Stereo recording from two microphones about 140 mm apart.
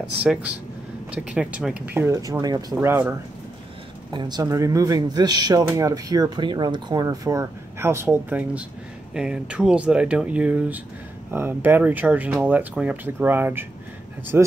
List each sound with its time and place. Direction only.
0.2 s speech: 10° right (ahead or behind)
4.1 s speech: 30° right (ahead or behind); by 14.5 s 15° right (ahead or behind)